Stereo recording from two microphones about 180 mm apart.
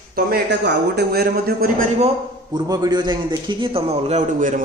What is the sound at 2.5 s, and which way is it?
A man's voice, 20° right (ahead or behind).